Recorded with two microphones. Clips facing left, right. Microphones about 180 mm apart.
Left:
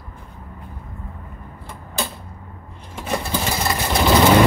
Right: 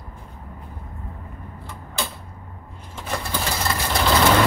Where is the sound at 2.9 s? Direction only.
15° left (ahead or behind).